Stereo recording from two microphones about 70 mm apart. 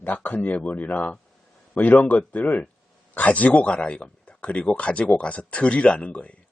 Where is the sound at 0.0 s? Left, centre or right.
Left.